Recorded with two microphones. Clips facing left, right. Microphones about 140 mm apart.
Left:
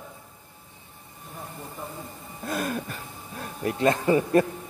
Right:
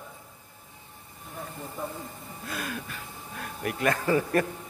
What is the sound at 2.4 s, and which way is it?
Speech, 45° left (ahead or behind).